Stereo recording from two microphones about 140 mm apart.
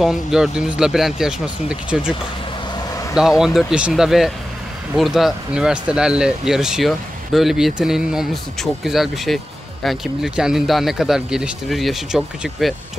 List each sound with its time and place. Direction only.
0.0 s speech: 5° right (ahead or behind)
3.2 s speech: 5° right (ahead or behind)